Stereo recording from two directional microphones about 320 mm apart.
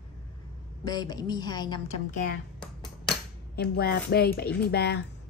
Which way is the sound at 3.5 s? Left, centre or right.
Left.